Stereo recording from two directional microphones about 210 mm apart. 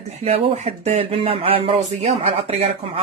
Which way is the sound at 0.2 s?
30° right (ahead or behind).